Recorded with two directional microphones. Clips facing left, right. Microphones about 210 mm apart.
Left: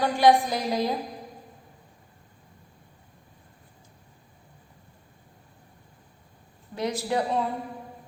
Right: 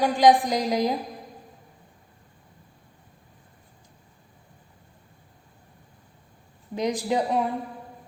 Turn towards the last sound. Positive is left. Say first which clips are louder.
# right 2 dB
turn(degrees=-15)  # may be behind; listen again after turning